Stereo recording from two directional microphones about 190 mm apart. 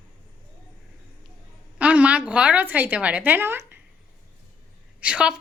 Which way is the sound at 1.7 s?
5° right (ahead or behind).